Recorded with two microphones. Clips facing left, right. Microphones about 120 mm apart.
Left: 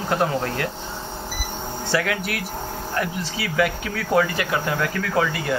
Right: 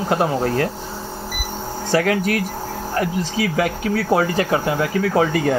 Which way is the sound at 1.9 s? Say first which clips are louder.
Right 6 dB; 40° right (ahead or behind).